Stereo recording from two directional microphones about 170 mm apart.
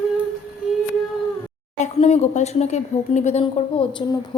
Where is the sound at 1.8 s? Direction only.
40° left (ahead or behind).